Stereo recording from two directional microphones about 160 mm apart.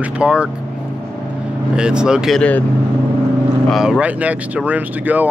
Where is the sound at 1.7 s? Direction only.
5° right (ahead or behind).